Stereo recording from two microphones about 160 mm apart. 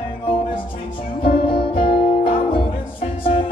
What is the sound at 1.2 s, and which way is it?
Music, 35° left (ahead or behind).